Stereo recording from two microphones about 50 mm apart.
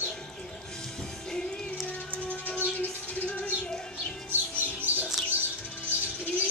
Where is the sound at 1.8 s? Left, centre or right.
Left.